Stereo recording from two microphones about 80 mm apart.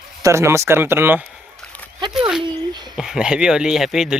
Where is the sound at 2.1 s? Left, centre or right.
Centre.